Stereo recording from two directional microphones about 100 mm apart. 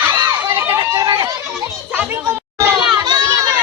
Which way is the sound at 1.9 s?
20° right (ahead or behind).